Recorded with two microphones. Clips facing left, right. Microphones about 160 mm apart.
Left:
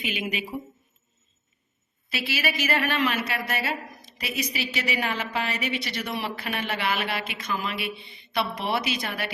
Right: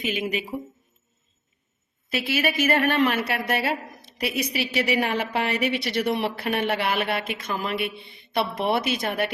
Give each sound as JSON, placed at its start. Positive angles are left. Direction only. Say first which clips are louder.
{"t": 0.0, "sound": "a woman's voice", "louder": "right 4 dB", "side_deg": -40}
{"t": 2.0, "sound": "a woman's voice", "louder": "right 4 dB", "side_deg": -50}